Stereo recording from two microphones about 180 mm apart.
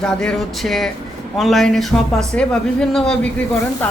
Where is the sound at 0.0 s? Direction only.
5° left (ahead or behind).